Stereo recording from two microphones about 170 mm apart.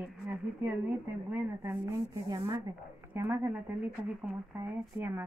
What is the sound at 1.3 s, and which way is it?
A woman's voice, 15° right (ahead or behind).